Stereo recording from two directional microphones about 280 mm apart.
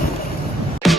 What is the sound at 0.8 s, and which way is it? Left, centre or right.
Music, centre.